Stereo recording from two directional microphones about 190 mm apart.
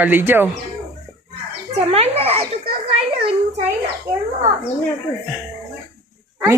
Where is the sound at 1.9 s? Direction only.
30° right (ahead or behind).